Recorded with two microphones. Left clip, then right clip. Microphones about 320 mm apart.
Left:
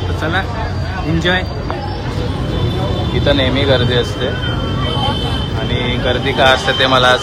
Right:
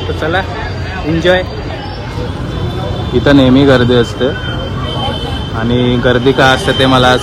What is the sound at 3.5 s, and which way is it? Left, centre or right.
Speech, right.